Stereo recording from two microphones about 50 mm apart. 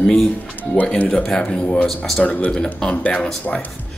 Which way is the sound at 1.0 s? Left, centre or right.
Centre.